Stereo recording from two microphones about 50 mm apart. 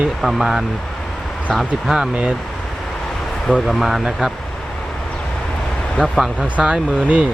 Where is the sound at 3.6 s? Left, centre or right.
Centre.